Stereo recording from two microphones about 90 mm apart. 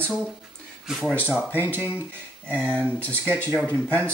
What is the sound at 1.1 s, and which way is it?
Speech, 25° left (ahead or behind).